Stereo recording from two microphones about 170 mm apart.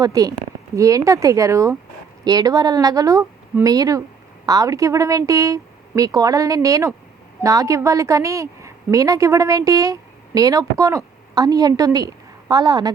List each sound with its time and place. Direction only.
0.0 s a woman's voice: 20° right (ahead or behind)